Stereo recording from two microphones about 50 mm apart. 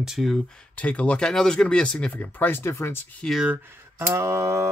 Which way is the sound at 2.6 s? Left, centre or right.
Left.